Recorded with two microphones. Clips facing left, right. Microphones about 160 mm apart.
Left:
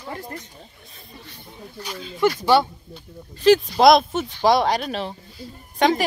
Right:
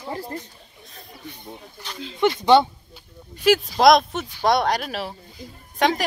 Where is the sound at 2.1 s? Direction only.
20° right (ahead or behind).